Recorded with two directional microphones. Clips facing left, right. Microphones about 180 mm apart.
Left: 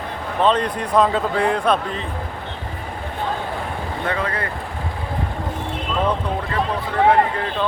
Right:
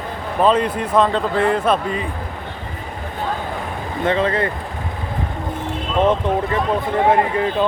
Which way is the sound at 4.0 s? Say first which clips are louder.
Right 7 dB; 25° right (ahead or behind).